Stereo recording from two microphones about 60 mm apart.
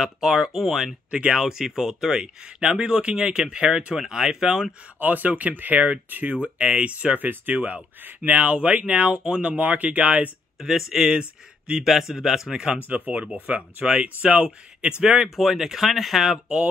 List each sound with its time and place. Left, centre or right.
0.0 s speech: centre
5.0 s speech: right
10.9 s speech: centre
11.8 s speech: centre
12.8 s speech: right; by 16.5 s centre